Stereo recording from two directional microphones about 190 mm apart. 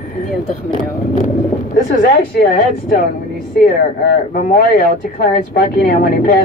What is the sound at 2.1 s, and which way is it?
Speech, 50° left (ahead or behind).